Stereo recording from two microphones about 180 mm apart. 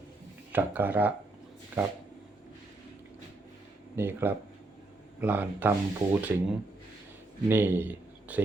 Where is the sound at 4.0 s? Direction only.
10° right (ahead or behind).